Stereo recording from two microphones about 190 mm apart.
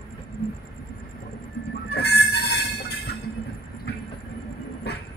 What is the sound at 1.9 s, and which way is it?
Train, 55° left (ahead or behind).